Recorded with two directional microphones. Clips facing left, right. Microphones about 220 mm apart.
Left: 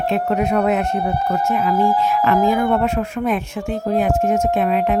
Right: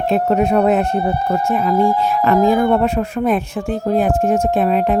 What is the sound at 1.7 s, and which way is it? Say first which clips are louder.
Speech: right 3 dB; 5° left (ahead or behind).